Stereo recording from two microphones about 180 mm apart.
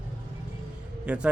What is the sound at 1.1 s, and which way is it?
Speech, 5° right (ahead or behind).